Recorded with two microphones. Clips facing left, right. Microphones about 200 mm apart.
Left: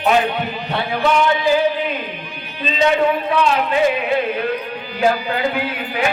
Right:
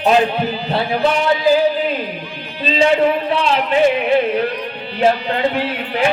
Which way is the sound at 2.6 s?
30° right (ahead or behind).